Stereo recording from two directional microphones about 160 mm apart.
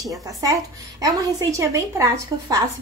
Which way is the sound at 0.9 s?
25° right (ahead or behind).